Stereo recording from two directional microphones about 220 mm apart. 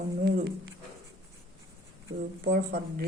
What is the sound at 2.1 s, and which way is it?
Speech, 35° right (ahead or behind).